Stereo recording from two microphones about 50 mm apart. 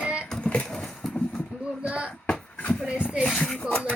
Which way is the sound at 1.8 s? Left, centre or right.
Right.